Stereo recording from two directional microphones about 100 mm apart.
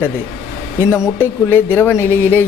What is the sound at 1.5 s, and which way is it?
Speech, 20° left (ahead or behind).